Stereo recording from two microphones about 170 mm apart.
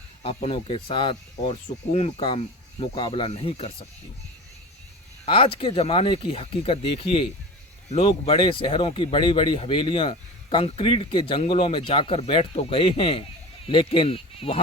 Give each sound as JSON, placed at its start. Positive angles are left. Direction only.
{"t": 0.2, "sound": "speech", "side_deg": 35}
{"t": 5.2, "sound": "speech", "side_deg": 30}